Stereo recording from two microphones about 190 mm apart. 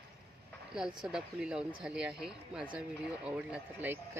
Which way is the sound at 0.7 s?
5° right (ahead or behind).